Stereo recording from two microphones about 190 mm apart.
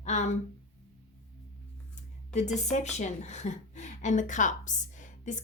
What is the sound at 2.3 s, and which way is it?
A woman's voice, 35° left (ahead or behind).